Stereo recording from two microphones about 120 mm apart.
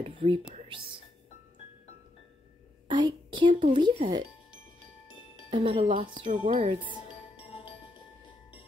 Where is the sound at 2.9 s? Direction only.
40° right (ahead or behind).